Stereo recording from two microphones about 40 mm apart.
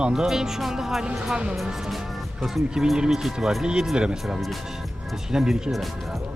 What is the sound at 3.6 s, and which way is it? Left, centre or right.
Speech, centre.